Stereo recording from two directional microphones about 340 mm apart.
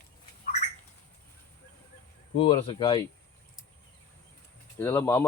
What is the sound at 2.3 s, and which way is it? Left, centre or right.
Speech, centre.